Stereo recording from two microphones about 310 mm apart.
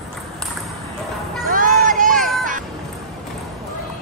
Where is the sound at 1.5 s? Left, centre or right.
Right.